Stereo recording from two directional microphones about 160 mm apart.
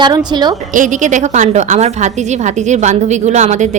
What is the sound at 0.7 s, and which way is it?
A woman's voice, 50° right (ahead or behind).